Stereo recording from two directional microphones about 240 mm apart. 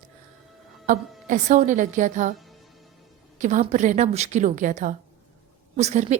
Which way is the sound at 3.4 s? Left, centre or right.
Right.